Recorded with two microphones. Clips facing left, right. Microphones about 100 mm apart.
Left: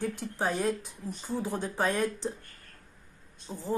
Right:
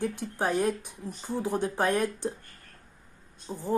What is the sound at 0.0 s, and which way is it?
Speech, 15° right (ahead or behind).